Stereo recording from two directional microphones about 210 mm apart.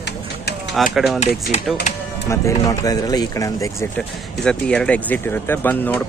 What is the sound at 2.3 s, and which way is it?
Speech, 15° left (ahead or behind).